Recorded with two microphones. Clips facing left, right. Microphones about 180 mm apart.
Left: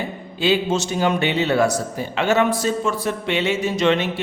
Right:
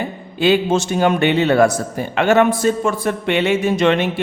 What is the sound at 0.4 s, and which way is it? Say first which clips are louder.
A man's voice: right 4 dB; 55° right (ahead or behind).